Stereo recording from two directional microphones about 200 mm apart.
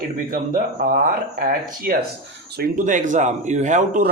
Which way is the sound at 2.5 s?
40° right (ahead or behind).